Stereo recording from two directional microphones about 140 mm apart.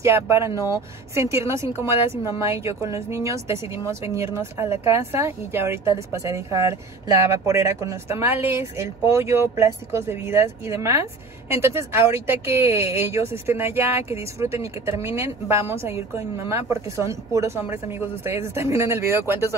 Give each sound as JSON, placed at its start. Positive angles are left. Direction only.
{"t": 0.0, "sound": "a woman's voice", "side_deg": -20}